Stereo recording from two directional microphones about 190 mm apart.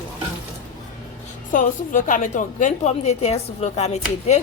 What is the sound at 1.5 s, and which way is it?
A woman's voice, 45° left (ahead or behind).